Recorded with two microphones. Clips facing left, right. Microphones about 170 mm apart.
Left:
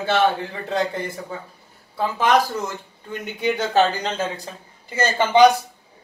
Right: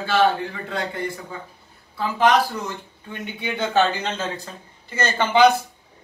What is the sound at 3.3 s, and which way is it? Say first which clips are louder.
Speech: left 2 dB; 40° left (ahead or behind).